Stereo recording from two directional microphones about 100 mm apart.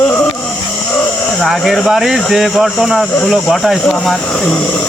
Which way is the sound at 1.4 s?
Centre (ahead or behind).